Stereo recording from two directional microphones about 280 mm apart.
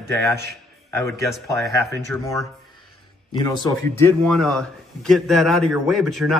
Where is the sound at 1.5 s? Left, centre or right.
Centre.